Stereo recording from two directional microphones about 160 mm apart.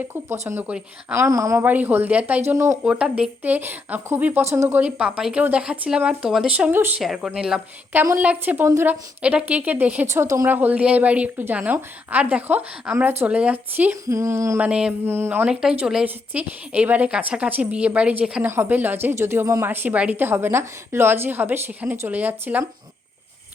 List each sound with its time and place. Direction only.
0.0 s a woman's voice: 15° right (ahead or behind)
14.7 s a woman's voice: 5° right (ahead or behind)